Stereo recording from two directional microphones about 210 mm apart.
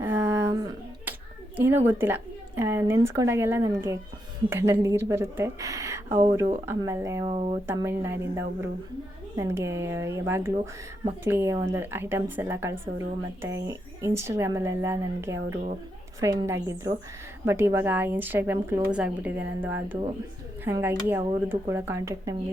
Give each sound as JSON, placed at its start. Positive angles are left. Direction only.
{"t": 0.0, "sound": "a sound", "side_deg": -10}
{"t": 1.5, "sound": "a woman's voice", "side_deg": -10}
{"t": 6.1, "sound": "speech", "side_deg": -30}
{"t": 6.7, "sound": "a woman's voice", "side_deg": -15}
{"t": 7.7, "sound": "a woman's voice", "side_deg": -10}